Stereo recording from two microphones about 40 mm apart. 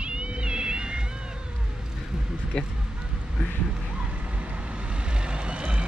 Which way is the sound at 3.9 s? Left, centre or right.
Right.